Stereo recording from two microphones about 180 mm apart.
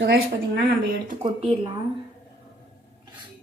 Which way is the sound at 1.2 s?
35° right (ahead or behind).